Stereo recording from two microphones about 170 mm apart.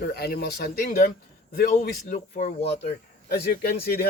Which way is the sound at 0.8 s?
55° left (ahead or behind).